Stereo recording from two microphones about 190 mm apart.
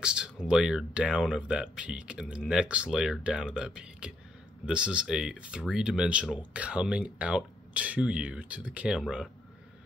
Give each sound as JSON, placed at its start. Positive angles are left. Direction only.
{"t": 0.0, "sound": "speech", "side_deg": -5}